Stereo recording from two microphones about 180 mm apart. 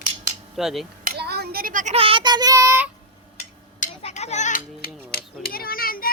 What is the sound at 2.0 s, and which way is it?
Child singing, 30° right (ahead or behind).